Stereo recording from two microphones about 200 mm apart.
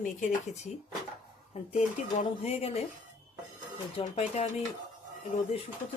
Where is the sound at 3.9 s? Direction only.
35° left (ahead or behind).